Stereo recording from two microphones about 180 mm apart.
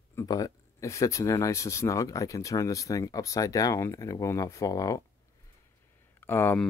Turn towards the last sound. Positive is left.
turn(degrees=10)  # may be behind; listen again after turning